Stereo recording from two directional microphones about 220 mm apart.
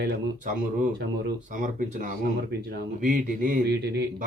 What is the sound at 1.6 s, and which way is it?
A man's voice, 35° right (ahead or behind).